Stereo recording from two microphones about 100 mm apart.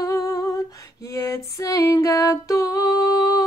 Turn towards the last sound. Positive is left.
turn(degrees=35)  # may be behind; listen again after turning